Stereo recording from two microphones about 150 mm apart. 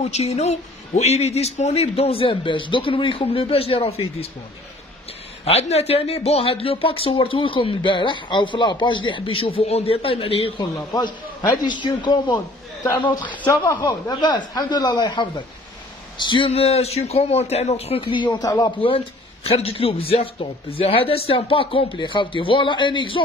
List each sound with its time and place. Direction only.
0.0 s speech: 45° left (ahead or behind)
5.4 s speech: 45° left (ahead or behind)
10.6 s a man's voice: 20° left (ahead or behind)
13.2 s speech: 10° left (ahead or behind)
13.5 s a man's voice: 25° left (ahead or behind)
18.8 s speech: 35° left (ahead or behind)